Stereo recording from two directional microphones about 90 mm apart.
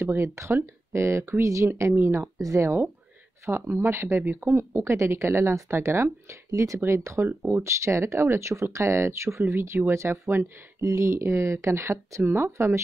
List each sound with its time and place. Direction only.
0.0 s speech: 30° right (ahead or behind)